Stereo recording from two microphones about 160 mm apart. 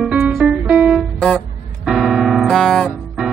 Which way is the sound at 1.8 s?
Centre (ahead or behind).